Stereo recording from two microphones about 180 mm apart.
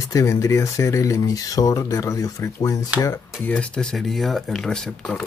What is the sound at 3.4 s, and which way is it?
Speech, 5° left (ahead or behind).